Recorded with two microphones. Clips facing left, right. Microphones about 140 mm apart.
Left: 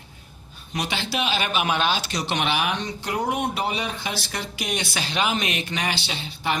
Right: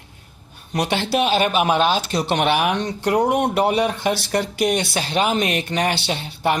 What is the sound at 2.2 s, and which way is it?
Speech, 55° right (ahead or behind).